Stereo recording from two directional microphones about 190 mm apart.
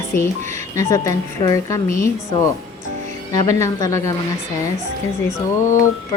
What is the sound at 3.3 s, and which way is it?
Speech, 15° left (ahead or behind).